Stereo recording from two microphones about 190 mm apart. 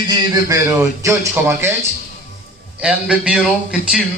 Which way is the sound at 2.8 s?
5° right (ahead or behind).